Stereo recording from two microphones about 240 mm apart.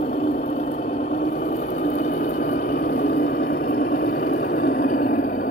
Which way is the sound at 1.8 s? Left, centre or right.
Left.